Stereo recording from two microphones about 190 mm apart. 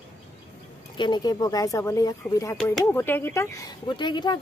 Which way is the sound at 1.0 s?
20° left (ahead or behind).